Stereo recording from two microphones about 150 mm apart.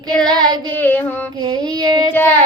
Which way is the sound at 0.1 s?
5° left (ahead or behind).